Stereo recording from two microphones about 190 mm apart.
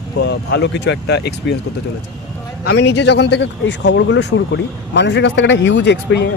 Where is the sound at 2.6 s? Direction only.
65° left (ahead or behind).